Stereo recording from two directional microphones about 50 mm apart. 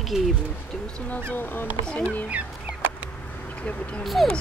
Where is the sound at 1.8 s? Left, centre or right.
Left.